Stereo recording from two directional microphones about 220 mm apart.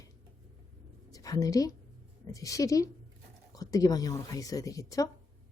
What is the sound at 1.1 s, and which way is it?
A woman's voice, 15° left (ahead or behind).